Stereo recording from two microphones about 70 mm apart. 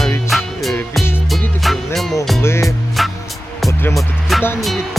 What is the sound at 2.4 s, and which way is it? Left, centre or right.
Music, left.